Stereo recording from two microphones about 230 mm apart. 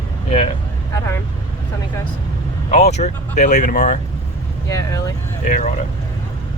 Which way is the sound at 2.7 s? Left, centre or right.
Left.